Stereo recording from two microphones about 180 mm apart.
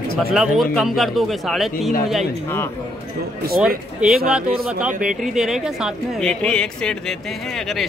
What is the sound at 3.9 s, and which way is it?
Speech, 5° right (ahead or behind).